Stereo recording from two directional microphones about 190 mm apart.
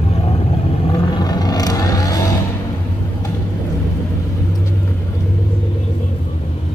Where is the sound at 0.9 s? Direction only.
20° left (ahead or behind).